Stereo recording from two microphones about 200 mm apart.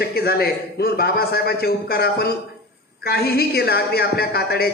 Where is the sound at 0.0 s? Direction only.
55° left (ahead or behind).